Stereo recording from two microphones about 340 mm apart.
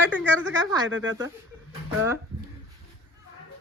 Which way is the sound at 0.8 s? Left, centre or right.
Right.